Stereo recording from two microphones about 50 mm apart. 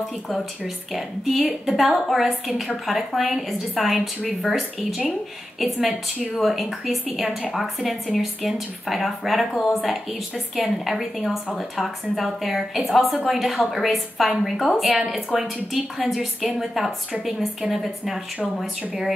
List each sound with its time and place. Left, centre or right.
0.9 s speech: centre